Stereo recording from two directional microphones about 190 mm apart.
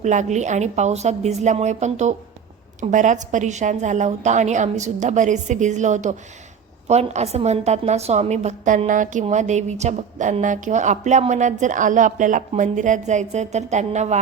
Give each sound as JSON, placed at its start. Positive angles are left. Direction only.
{"t": 0.0, "sound": "a woman's voice", "side_deg": -40}